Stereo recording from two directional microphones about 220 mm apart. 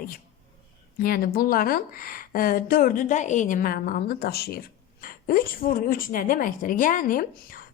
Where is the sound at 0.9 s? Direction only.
40° left (ahead or behind).